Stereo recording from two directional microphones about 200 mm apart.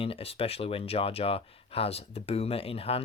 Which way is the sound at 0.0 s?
30° left (ahead or behind).